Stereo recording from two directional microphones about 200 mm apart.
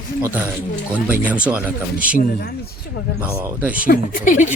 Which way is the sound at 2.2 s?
50° left (ahead or behind).